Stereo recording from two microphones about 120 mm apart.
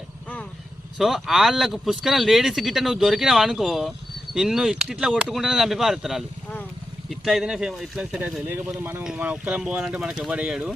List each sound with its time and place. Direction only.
0.9 s speech: centre (ahead or behind)
8.4 s speech: 20° right (ahead or behind)